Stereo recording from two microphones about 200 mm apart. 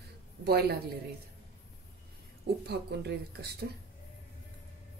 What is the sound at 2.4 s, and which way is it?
Speech, 55° right (ahead or behind).